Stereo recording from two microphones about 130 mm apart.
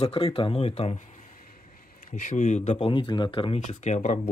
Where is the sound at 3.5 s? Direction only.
65° left (ahead or behind).